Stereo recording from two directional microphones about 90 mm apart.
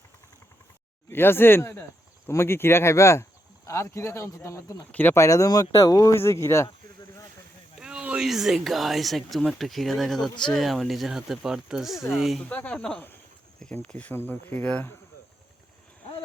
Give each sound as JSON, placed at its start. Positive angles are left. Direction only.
{"t": 1.1, "sound": "speech", "side_deg": 25}
{"t": 4.9, "sound": "speech", "side_deg": 20}
{"t": 5.1, "sound": "speech", "side_deg": 35}
{"t": 7.8, "sound": "speech", "side_deg": -10}
{"t": 12.5, "sound": "speech", "side_deg": 15}